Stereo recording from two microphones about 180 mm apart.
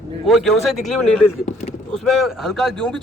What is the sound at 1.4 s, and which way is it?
Speech, 40° left (ahead or behind).